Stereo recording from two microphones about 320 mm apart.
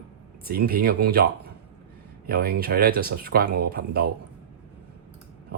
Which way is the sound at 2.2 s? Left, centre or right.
Right.